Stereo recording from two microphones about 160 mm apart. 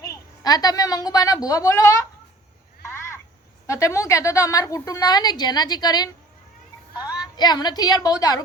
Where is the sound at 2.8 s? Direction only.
15° left (ahead or behind).